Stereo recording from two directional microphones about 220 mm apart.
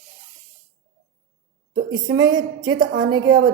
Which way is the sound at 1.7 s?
60° right (ahead or behind).